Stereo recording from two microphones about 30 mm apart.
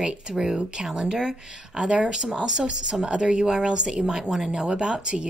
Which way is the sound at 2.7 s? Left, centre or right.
Right.